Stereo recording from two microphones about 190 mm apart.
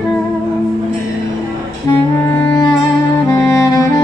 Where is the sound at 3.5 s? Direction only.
15° left (ahead or behind).